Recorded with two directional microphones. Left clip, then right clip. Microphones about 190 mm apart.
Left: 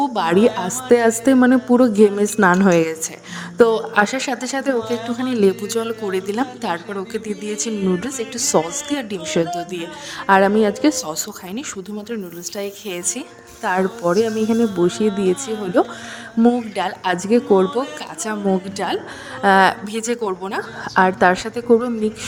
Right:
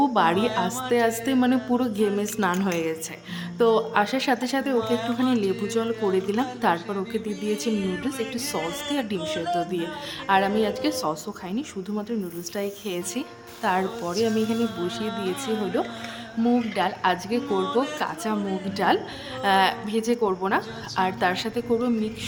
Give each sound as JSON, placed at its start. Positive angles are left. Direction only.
{"t": 0.0, "sound": "music", "side_deg": 45}
{"t": 0.3, "sound": "speech", "side_deg": 0}
{"t": 0.6, "sound": "a woman's voice", "side_deg": 40}
{"t": 4.8, "sound": "speech", "side_deg": 0}
{"t": 5.4, "sound": "speech", "side_deg": 50}
{"t": 7.3, "sound": "speech", "side_deg": 0}
{"t": 8.4, "sound": "speech", "side_deg": 45}
{"t": 9.4, "sound": "speech", "side_deg": 0}
{"t": 10.2, "sound": "a woman's voice", "side_deg": 40}
{"t": 15.0, "sound": "speech", "side_deg": 0}
{"t": 15.6, "sound": "a woman's voice", "side_deg": 35}
{"t": 16.6, "sound": "a woman's voice", "side_deg": 45}